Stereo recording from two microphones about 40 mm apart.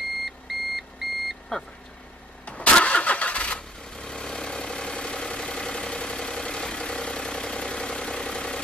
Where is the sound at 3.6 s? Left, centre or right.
Centre.